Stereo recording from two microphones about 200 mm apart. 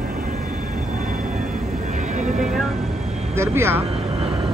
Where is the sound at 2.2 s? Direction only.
40° right (ahead or behind).